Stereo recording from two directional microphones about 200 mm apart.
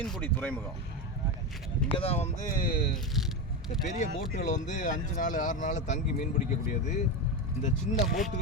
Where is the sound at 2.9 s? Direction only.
Centre (ahead or behind).